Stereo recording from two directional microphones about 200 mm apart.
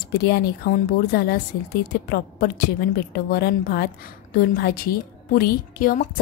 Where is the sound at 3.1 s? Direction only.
50° left (ahead or behind).